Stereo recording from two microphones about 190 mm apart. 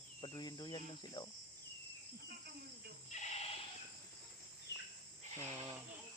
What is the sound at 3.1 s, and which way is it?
Sheep, 35° left (ahead or behind).